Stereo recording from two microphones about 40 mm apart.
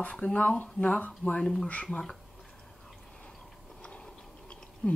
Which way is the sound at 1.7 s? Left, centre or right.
Left.